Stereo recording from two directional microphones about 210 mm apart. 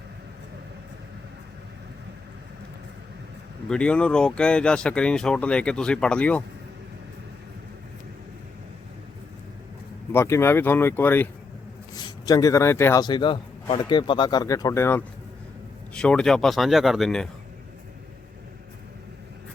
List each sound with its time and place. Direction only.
3.7 s speech: 5° left (ahead or behind)
10.1 s a man's voice: 10° left (ahead or behind)